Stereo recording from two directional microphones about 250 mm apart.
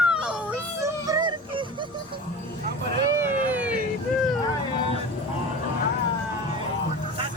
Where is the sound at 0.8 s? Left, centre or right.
Centre.